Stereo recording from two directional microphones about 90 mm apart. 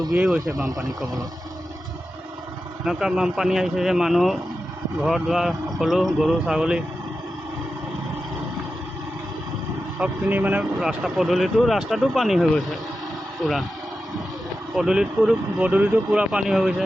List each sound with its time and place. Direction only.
0.1 s speech: 5° right (ahead or behind)
2.8 s speech: 5° right (ahead or behind)
10.0 s speech: 20° right (ahead or behind)
10.6 s speech: 5° right (ahead or behind)
14.8 s speech: 5° right (ahead or behind)